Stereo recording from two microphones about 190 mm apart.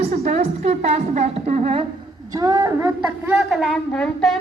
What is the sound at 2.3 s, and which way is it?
A woman's voice, 20° right (ahead or behind).